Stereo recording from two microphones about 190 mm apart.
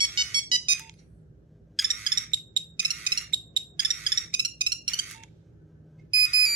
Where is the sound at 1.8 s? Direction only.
25° right (ahead or behind).